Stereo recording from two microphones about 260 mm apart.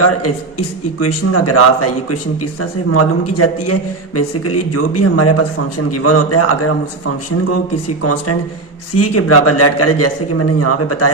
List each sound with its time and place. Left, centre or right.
0.0 s a man's voice: left
9.0 s a man's voice: left